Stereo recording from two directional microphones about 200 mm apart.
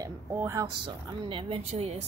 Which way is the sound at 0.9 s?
25° right (ahead or behind).